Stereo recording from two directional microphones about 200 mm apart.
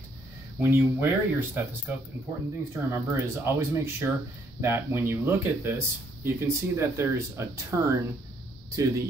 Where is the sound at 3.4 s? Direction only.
10° right (ahead or behind).